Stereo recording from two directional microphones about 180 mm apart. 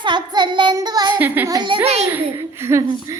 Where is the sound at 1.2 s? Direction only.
10° right (ahead or behind).